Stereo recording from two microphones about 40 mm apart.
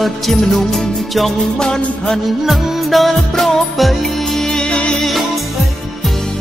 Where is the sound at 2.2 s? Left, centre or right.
Centre.